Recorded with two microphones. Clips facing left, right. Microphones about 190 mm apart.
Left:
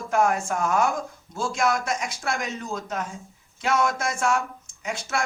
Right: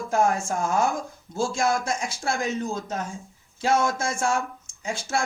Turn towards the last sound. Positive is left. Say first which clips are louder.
# right 1 dB
turn(degrees=-30)  # may be behind; listen again after turning